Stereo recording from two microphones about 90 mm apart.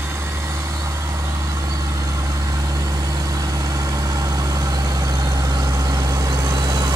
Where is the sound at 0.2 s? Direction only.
30° right (ahead or behind).